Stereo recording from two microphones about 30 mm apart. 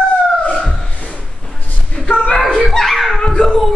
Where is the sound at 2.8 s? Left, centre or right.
Centre.